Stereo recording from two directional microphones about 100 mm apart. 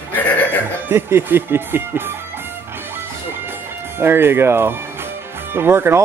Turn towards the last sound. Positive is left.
turn(degrees=-25)  # may be behind; listen again after turning